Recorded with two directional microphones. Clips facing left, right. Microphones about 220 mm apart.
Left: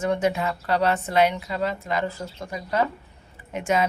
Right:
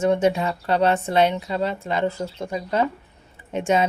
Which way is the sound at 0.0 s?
25° right (ahead or behind).